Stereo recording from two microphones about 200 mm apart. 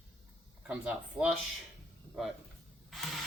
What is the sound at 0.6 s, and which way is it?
Speech, 5° right (ahead or behind).